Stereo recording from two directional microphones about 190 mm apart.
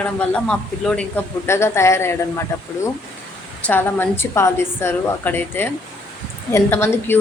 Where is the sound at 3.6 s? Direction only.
10° left (ahead or behind).